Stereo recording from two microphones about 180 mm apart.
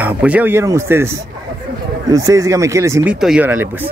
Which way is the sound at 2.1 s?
15° right (ahead or behind).